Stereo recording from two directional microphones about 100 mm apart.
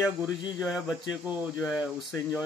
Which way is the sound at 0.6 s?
5° right (ahead or behind).